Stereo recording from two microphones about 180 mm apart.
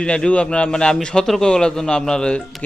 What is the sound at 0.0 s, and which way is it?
A man's voice, 5° left (ahead or behind).